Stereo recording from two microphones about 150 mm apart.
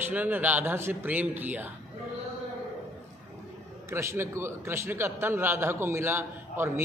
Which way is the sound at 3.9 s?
20° right (ahead or behind).